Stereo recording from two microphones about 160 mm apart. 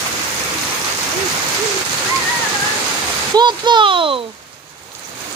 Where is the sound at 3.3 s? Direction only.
25° right (ahead or behind).